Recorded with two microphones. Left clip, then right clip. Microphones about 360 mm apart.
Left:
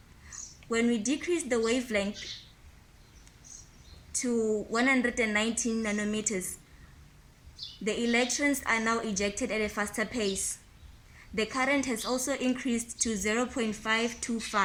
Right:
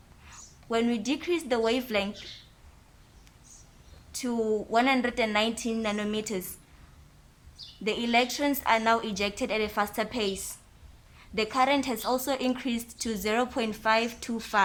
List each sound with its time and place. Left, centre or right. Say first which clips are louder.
0.7 s a woman's voice: right 1 dB; right
4.8 s a woman's voice: right 1 dB; right
7.9 s a woman's voice: right 2 dB; right